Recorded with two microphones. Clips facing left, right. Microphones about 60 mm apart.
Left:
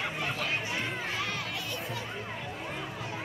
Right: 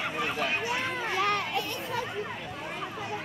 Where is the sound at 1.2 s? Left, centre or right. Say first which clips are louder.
Right 7 dB; right.